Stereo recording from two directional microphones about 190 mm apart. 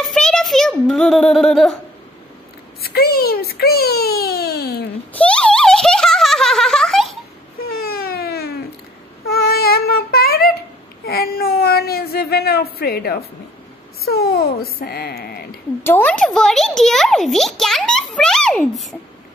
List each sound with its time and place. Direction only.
0.0 s a sound: centre (ahead or behind)
2.8 s a child's voice: 55° left (ahead or behind)
5.1 s a sound: 5° left (ahead or behind)
7.7 s baby cry: 55° left (ahead or behind)
9.3 s child singing: 55° left (ahead or behind)
11.1 s a woman's voice: 55° left (ahead or behind)
15.8 s a child's voice: 10° left (ahead or behind)